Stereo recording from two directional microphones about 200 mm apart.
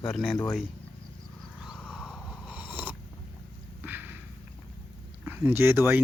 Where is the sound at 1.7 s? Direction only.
Centre (ahead or behind).